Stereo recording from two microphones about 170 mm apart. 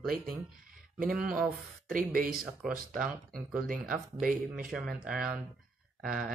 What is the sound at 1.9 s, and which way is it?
Speech, 55° right (ahead or behind).